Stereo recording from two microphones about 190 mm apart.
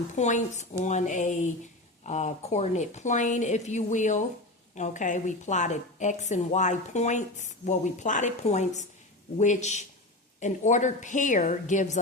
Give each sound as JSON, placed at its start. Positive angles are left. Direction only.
{"t": 0.2, "sound": "a woman's voice", "side_deg": 40}